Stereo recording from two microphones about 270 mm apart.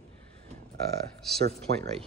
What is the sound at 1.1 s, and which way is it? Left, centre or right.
Speech, right.